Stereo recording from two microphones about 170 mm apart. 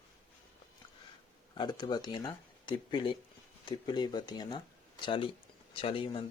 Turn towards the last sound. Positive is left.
turn(degrees=30)  # may be behind; listen again after turning